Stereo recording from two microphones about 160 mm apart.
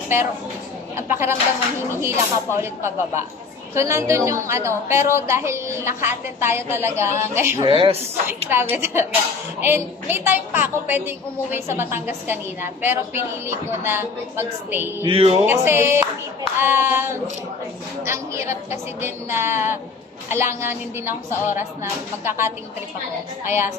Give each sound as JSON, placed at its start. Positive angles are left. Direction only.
{"t": 1.0, "sound": "a woman's voice", "side_deg": -15}
{"t": 7.6, "sound": "a woman's voice", "side_deg": -35}
{"t": 8.5, "sound": "a woman's voice", "side_deg": -15}
{"t": 15.0, "sound": "a woman's voice", "side_deg": -35}
{"t": 15.4, "sound": "a woman's voice", "side_deg": -15}
{"t": 18.0, "sound": "a woman's voice", "side_deg": -15}